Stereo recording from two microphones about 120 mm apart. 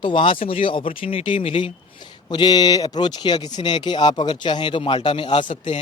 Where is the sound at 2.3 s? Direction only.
35° left (ahead or behind).